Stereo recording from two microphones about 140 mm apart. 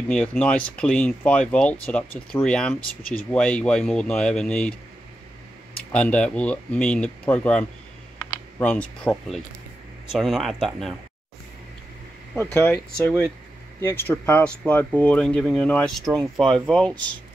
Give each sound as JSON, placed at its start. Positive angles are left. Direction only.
{"t": 0.1, "sound": "speech", "side_deg": 10}
{"t": 5.9, "sound": "speech", "side_deg": 10}
{"t": 12.4, "sound": "speech", "side_deg": 15}